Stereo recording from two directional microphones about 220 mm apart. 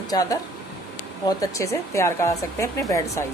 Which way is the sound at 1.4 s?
15° left (ahead or behind).